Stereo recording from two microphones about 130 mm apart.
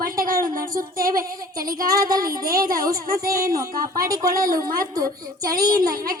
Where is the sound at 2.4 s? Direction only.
90° right.